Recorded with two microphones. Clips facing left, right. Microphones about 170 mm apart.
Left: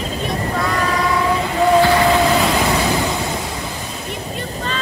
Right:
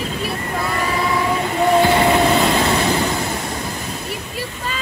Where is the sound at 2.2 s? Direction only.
Centre (ahead or behind).